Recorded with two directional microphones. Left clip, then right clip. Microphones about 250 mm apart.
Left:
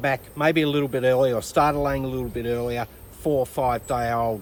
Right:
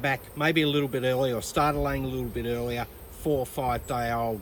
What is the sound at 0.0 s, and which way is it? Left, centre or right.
Speech, centre.